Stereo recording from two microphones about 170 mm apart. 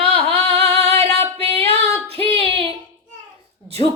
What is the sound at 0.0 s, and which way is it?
Singing, 35° right (ahead or behind).